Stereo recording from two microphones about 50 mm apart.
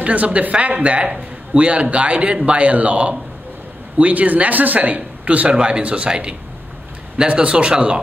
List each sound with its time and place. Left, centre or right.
0.0 s speech: right